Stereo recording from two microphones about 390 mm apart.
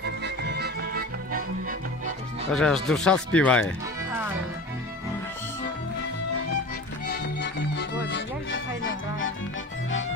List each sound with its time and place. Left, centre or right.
0.0 s music: right
2.5 s speech: centre
3.3 s music: centre
7.1 s music: left